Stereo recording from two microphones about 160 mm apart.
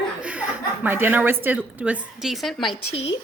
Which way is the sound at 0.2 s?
10° right (ahead or behind).